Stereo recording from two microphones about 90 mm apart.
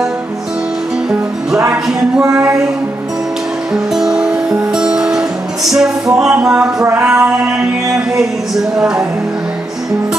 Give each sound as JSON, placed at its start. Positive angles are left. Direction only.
{"t": 2.2, "sound": "a sound", "side_deg": -30}
{"t": 3.7, "sound": "music", "side_deg": -5}
{"t": 7.1, "sound": "music", "side_deg": -5}